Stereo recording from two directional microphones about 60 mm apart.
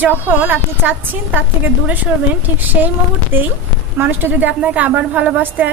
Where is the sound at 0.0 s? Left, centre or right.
Right.